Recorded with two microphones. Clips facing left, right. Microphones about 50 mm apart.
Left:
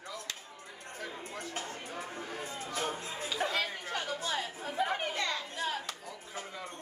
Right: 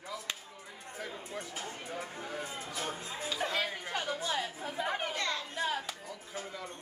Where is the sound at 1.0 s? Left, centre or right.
Centre.